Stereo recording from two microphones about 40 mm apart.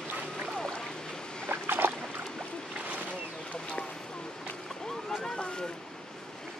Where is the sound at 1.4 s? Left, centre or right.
Right.